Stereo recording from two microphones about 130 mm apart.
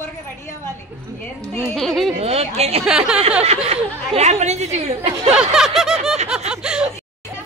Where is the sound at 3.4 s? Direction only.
55° right (ahead or behind).